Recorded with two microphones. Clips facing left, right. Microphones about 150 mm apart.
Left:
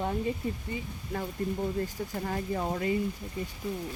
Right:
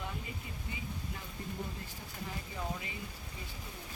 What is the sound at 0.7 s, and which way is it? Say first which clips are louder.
Speech: left 7 dB; 60° left (ahead or behind).